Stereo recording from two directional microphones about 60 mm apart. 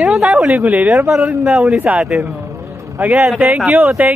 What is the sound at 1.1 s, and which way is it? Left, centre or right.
Speech, centre.